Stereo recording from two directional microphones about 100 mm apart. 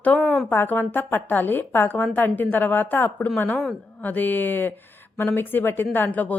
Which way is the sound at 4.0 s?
20° left (ahead or behind).